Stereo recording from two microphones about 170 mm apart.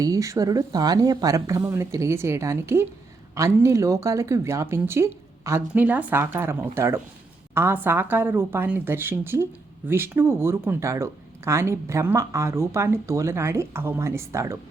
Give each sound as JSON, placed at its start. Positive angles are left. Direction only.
{"t": 0.0, "sound": "a woman's voice", "side_deg": -20}